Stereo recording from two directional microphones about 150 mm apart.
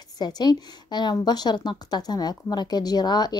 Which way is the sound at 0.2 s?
30° left (ahead or behind).